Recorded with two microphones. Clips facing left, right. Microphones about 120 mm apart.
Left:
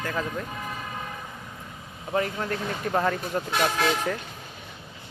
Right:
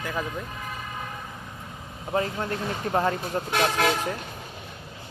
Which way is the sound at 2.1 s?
25° right (ahead or behind).